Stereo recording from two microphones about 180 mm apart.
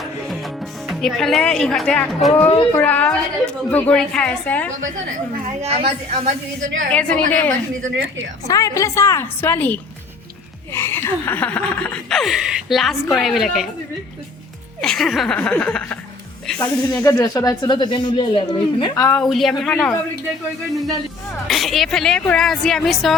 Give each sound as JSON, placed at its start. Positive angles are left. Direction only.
{"t": 0.9, "sound": "a woman's voice", "side_deg": 0}
{"t": 5.6, "sound": "a woman's voice", "side_deg": -35}
{"t": 6.9, "sound": "a woman's voice", "side_deg": 5}
{"t": 7.8, "sound": "a woman's voice", "side_deg": -90}
{"t": 8.4, "sound": "a woman's voice", "side_deg": 20}
{"t": 14.8, "sound": "speech", "side_deg": 5}
{"t": 16.6, "sound": "speech", "side_deg": 20}
{"t": 19.2, "sound": "speech", "side_deg": 0}
{"t": 19.7, "sound": "a woman's voice", "side_deg": 15}
{"t": 21.4, "sound": "speech", "side_deg": 0}